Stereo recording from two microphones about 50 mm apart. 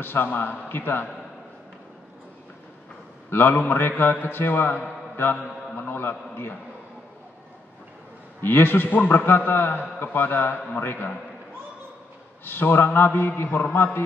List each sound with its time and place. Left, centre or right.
0.0 s a man's voice: left
3.3 s a man's voice: left
5.1 s mantra: left
5.9 s a man's voice: left
8.4 s a man's voice: left
12.4 s a man's voice: left
13.5 s mantra: left